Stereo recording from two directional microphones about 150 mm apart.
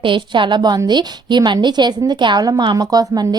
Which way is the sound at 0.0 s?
35° right (ahead or behind).